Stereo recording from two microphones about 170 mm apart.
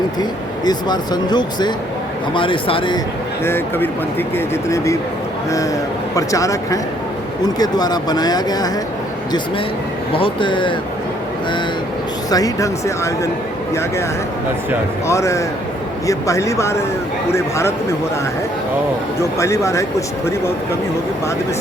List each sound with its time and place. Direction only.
0.2 s speech: 25° left (ahead or behind)
3.4 s a man's voice: 15° left (ahead or behind)
6.1 s speech: 20° left (ahead or behind)
10.2 s speech: 30° left (ahead or behind)
12.3 s speech: 20° left (ahead or behind)
15.0 s a man's voice: 15° left (ahead or behind)
19.2 s a man's voice: 15° left (ahead or behind)